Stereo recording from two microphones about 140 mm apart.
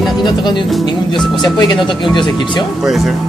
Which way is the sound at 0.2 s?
35° left (ahead or behind).